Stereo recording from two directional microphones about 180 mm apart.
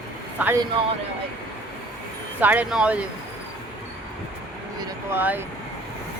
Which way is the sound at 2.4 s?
10° right (ahead or behind).